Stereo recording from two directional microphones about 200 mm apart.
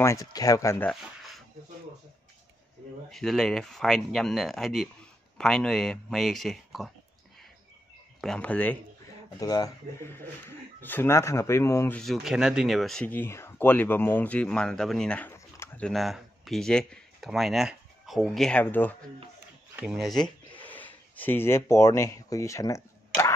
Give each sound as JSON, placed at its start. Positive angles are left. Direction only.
{"t": 0.0, "sound": "speech", "side_deg": 15}
{"t": 3.1, "sound": "speech", "side_deg": 0}
{"t": 8.2, "sound": "speech", "side_deg": 5}
{"t": 9.4, "sound": "speech", "side_deg": 20}
{"t": 12.0, "sound": "speech", "side_deg": 0}
{"t": 19.7, "sound": "speech", "side_deg": -5}